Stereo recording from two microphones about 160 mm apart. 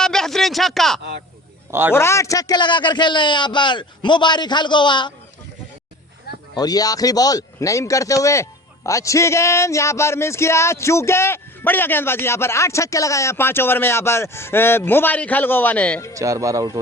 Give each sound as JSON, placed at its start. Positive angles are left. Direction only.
{"t": 0.0, "sound": "speech", "side_deg": 5}
{"t": 1.9, "sound": "a man's voice", "side_deg": 15}
{"t": 6.3, "sound": "a sound", "side_deg": 75}
{"t": 6.6, "sound": "speech", "side_deg": 25}
{"t": 16.1, "sound": "speech", "side_deg": -20}